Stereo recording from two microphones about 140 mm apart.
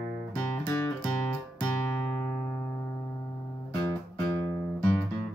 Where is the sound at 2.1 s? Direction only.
15° left (ahead or behind).